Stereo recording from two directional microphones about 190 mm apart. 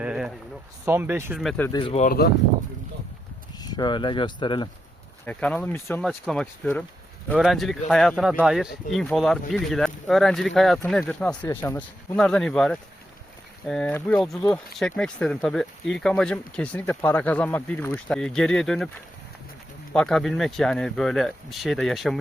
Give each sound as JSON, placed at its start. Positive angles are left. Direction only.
{"t": 0.0, "sound": "a sound", "side_deg": -5}
{"t": 0.9, "sound": "speech", "side_deg": -15}
{"t": 1.5, "sound": "speech", "side_deg": 10}
{"t": 1.7, "sound": "speech", "side_deg": 30}
{"t": 2.0, "sound": "speech", "side_deg": 55}
{"t": 3.6, "sound": "speech", "side_deg": 20}
{"t": 5.2, "sound": "speech", "side_deg": 5}
{"t": 19.9, "sound": "speech", "side_deg": 5}